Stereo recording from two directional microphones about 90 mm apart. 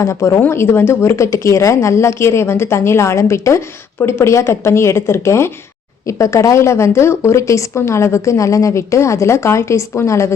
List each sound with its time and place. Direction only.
0.0 s a woman's voice: 35° left (ahead or behind)